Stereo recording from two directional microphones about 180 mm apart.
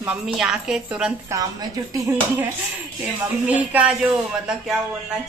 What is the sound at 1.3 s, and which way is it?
Speech, 15° right (ahead or behind).